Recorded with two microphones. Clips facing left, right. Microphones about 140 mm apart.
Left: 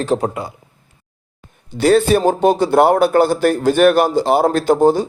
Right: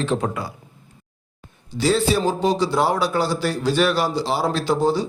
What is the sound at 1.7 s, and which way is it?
A man's voice, 55° left (ahead or behind).